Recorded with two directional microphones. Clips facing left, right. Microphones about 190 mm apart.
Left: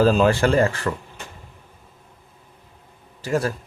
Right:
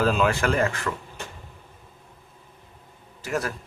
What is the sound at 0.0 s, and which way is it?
Speech, 35° left (ahead or behind).